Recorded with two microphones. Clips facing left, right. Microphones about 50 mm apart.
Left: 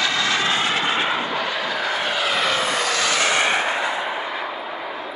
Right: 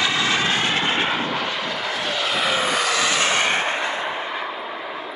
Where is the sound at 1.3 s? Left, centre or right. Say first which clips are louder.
Left 1 dB; centre.